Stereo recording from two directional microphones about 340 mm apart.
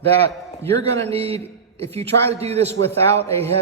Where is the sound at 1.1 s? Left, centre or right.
Centre.